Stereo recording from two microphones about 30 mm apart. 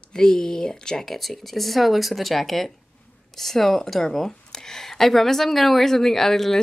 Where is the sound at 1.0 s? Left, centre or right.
Centre.